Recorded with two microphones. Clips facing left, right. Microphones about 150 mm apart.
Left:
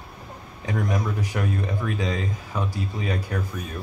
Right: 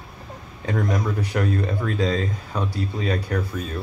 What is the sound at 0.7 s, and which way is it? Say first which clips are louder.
Speech: right 2 dB; 15° left (ahead or behind).